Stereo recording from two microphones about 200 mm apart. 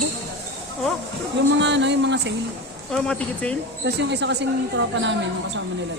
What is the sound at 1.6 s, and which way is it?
Speech, 60° right (ahead or behind).